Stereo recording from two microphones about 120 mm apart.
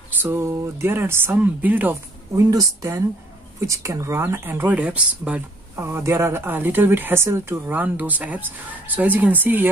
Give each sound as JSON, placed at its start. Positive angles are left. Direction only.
{"t": 0.2, "sound": "speech", "side_deg": -20}
{"t": 2.3, "sound": "speech", "side_deg": -25}